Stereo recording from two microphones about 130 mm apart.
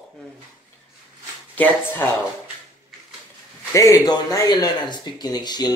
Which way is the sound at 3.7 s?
25° left (ahead or behind).